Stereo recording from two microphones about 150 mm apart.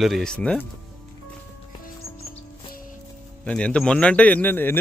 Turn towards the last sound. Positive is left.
turn(degrees=15)  # may be behind; listen again after turning